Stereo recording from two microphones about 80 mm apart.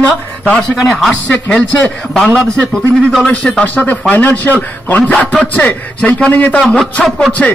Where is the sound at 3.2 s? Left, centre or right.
Centre.